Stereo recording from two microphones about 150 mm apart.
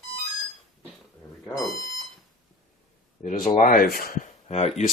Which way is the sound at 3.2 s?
60° left (ahead or behind).